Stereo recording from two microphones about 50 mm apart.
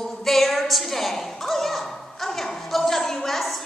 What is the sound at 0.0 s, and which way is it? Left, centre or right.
A woman's voice, centre.